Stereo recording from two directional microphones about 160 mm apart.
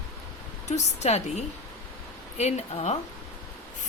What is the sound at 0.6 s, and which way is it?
Speech, 45° left (ahead or behind).